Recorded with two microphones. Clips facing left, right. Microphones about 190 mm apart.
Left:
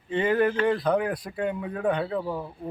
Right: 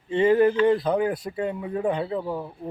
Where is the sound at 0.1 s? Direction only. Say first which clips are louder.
Right 4 dB; 25° right (ahead or behind).